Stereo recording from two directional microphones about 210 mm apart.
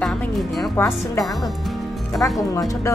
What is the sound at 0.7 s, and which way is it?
Speech, 15° left (ahead or behind).